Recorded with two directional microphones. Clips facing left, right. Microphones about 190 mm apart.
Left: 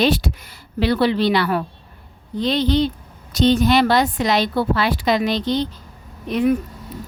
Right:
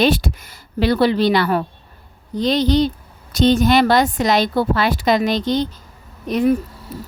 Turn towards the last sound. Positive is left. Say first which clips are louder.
# right 2 dB
turn(degrees=-40)  # may be behind; listen again after turning